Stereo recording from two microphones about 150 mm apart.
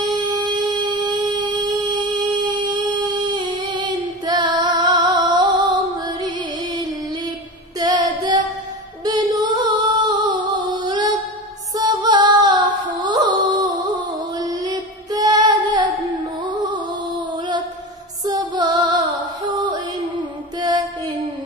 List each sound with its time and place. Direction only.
0.0 s a sound: 30° right (ahead or behind)
1.7 s humming: 30° right (ahead or behind)
7.8 s female singing: 25° right (ahead or behind)
9.0 s music: 30° right (ahead or behind)
14.4 s female singing: 25° right (ahead or behind)
18.2 s music: 25° right (ahead or behind)
20.2 s music: 30° right (ahead or behind)